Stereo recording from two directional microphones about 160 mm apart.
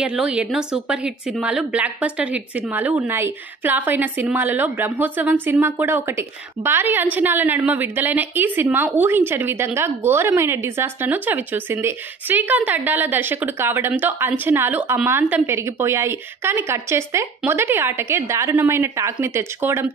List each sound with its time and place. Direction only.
0.0 s speech: 5° right (ahead or behind)